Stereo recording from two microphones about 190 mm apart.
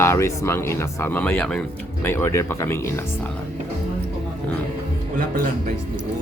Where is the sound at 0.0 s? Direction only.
15° left (ahead or behind).